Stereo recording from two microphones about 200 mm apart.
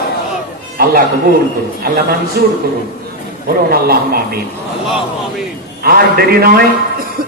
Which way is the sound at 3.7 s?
50° right (ahead or behind).